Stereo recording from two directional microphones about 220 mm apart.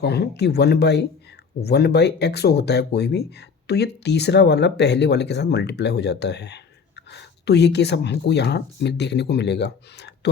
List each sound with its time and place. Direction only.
0.0 s speech: 50° left (ahead or behind)